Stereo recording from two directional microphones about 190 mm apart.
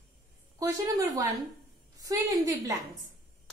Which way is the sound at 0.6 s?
20° right (ahead or behind).